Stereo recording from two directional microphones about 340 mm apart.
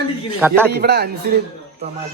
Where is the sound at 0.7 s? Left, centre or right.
Right.